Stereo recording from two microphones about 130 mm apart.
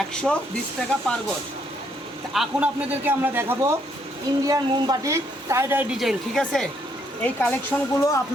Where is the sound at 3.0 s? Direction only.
15° right (ahead or behind).